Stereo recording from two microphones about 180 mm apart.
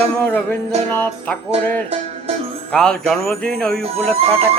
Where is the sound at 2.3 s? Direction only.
30° right (ahead or behind).